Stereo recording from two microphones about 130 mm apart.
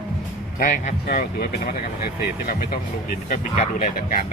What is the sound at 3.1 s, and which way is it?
Speech, 90° left.